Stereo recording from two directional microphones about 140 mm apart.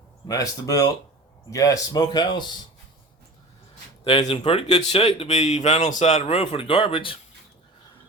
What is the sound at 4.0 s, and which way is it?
Speech, 40° left (ahead or behind).